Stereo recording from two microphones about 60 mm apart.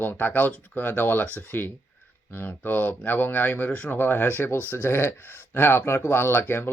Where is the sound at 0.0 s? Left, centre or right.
Left.